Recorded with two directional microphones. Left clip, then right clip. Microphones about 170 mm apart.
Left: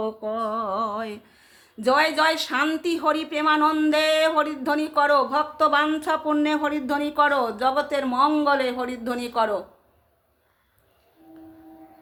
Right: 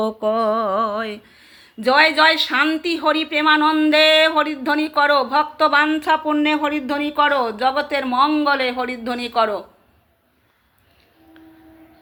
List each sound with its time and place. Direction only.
0.3 s humming: 30° right (ahead or behind)
0.8 s speech: 5° right (ahead or behind)